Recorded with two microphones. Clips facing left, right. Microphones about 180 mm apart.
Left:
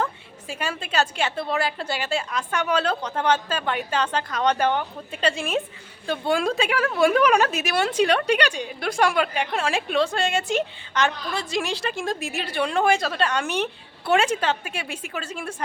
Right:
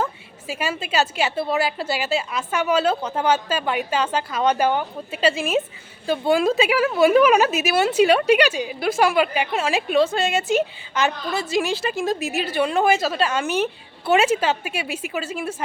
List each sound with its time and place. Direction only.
0.0 s a woman's voice: 5° right (ahead or behind)